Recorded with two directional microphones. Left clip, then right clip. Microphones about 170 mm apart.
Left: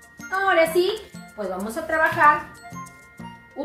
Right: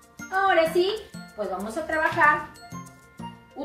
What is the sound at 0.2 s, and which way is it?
Speech, centre (ahead or behind).